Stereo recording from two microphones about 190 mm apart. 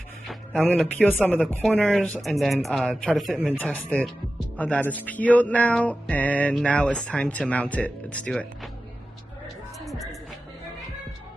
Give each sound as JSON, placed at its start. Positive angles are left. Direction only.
{"t": 0.3, "sound": "speech", "side_deg": 5}
{"t": 9.8, "sound": "music", "side_deg": 0}